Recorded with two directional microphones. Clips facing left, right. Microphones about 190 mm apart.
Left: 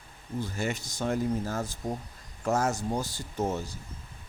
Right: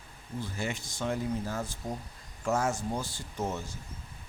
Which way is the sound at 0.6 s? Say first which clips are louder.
Left 2 dB; 40° left (ahead or behind).